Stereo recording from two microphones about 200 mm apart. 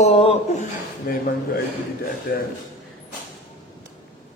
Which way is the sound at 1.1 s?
45° left (ahead or behind).